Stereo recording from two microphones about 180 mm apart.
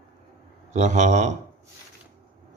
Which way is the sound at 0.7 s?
40° right (ahead or behind).